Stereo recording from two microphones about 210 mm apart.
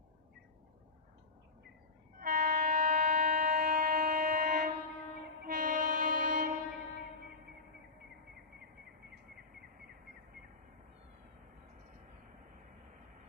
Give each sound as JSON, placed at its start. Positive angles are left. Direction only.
{"t": 2.1, "sound": "train", "side_deg": -40}